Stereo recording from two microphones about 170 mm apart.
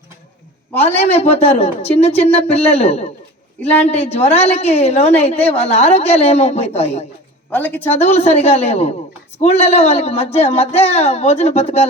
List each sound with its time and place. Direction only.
0.7 s a man's voice: 10° left (ahead or behind)
0.9 s a woman's voice: 40° left (ahead or behind)
3.6 s a woman's voice: 10° left (ahead or behind)
3.8 s a woman's voice: 40° left (ahead or behind)
7.5 s a woman's voice: 10° left (ahead or behind)
7.9 s a woman's voice: 40° left (ahead or behind)